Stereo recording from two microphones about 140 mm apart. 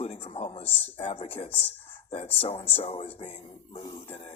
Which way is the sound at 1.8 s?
45° left (ahead or behind).